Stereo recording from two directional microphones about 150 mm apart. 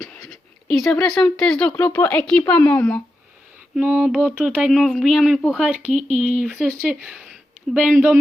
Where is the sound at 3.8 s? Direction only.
10° right (ahead or behind).